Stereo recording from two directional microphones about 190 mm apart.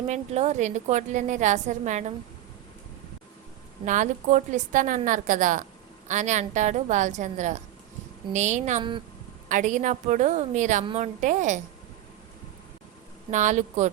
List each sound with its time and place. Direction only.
0.1 s a woman's voice: 35° right (ahead or behind)
3.8 s a woman's voice: 40° right (ahead or behind)
13.3 s a woman's voice: 40° right (ahead or behind)